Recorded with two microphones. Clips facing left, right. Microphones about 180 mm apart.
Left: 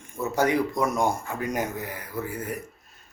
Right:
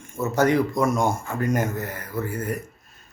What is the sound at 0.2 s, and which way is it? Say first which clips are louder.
Speech: right 3 dB; 15° left (ahead or behind).